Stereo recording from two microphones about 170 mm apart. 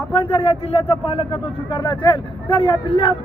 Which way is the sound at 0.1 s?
35° left (ahead or behind).